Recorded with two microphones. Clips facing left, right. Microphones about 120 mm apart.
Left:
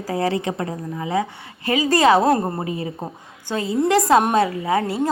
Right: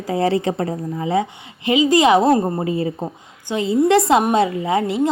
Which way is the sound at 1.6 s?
20° right (ahead or behind).